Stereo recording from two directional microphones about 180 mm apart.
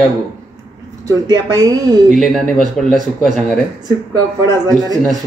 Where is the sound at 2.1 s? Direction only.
Centre (ahead or behind).